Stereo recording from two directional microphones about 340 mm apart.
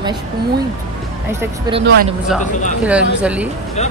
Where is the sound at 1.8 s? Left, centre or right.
Right.